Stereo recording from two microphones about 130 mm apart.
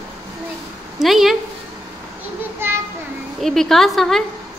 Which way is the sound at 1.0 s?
Centre (ahead or behind).